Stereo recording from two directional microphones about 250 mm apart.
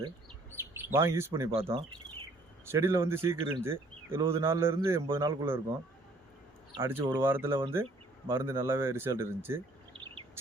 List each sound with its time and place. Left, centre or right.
0.9 s speech: centre
2.6 s speech: centre
6.7 s speech: centre
9.9 s a sound: right